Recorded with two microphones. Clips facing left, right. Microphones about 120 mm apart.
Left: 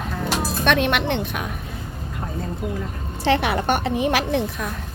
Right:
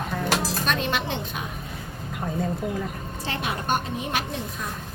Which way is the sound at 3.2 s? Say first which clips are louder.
Left 10 dB; 70° left (ahead or behind).